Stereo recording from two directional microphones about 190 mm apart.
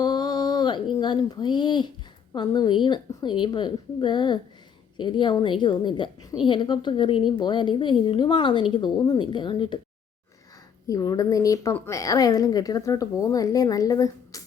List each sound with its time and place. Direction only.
0.0 s a sound: 20° left (ahead or behind)
2.3 s a woman's voice: 20° left (ahead or behind)
10.8 s a woman's voice: 15° left (ahead or behind)